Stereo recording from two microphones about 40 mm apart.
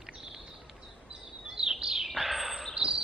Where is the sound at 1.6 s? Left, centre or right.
Centre.